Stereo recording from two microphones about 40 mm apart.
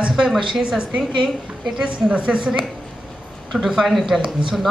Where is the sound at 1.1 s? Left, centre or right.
Centre.